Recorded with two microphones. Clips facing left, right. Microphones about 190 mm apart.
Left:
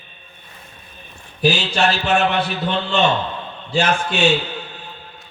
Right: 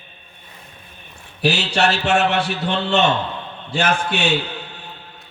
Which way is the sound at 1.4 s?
70° right (ahead or behind).